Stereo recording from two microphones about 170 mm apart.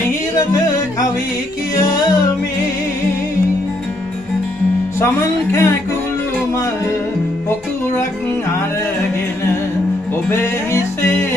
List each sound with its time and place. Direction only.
1.8 s music: 25° left (ahead or behind)
5.0 s music: 15° left (ahead or behind)
10.3 s music: 15° left (ahead or behind)